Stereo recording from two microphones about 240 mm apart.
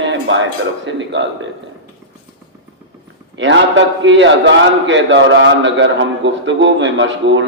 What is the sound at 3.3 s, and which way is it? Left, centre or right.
A man's voice, right.